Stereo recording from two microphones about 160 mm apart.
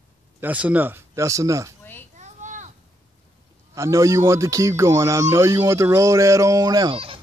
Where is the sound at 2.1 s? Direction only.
50° right (ahead or behind).